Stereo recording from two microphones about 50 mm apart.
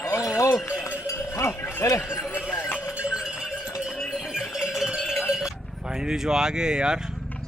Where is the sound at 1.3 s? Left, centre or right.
Left.